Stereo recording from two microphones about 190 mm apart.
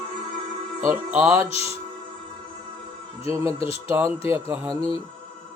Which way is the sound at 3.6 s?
30° left (ahead or behind).